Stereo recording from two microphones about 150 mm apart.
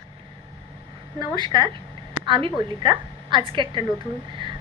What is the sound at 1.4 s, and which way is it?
A woman's voice, 30° right (ahead or behind).